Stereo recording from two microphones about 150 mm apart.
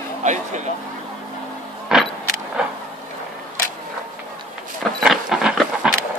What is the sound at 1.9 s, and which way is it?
Vehicle, 5° right (ahead or behind).